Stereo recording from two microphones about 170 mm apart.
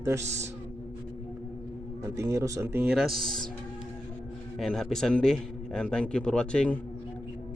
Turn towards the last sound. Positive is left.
turn(degrees=5)  # may be behind; listen again after turning